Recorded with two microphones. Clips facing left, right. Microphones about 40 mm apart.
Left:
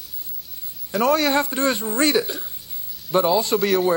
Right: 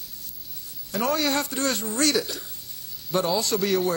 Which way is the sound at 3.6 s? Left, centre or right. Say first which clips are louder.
Left 4 dB; centre.